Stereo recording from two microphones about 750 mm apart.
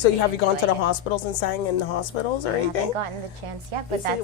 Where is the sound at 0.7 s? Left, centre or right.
Left.